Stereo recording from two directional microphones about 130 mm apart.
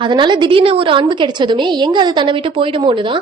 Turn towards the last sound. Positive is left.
turn(degrees=-40)  # may be behind; listen again after turning